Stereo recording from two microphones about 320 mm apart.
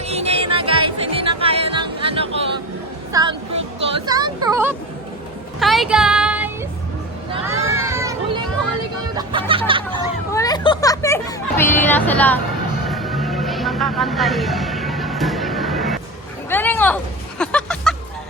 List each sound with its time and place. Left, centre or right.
0.1 s music: centre
3.1 s a sound: centre
5.5 s music: centre
7.8 s children playing: centre
9.1 s a sound: centre
10.3 s vehicle: centre
12.9 s music: centre